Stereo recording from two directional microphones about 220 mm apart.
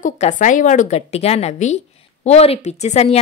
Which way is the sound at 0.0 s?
35° left (ahead or behind).